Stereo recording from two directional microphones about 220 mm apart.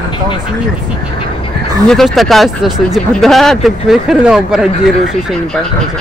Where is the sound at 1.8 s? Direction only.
Centre (ahead or behind).